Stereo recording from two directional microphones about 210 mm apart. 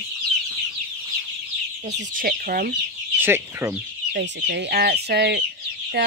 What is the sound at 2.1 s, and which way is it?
Speech, 45° right (ahead or behind).